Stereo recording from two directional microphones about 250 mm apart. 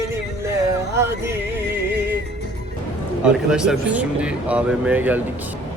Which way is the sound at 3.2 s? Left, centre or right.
Centre.